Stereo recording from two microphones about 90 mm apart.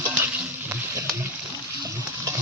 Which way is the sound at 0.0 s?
25° right (ahead or behind).